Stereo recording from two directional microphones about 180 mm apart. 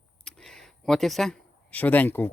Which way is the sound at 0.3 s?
Centre (ahead or behind).